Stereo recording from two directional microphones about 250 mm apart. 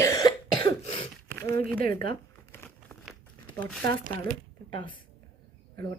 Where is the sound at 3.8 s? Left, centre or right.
Right.